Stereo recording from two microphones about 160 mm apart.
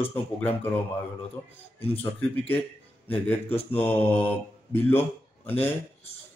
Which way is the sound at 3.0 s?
10° left (ahead or behind).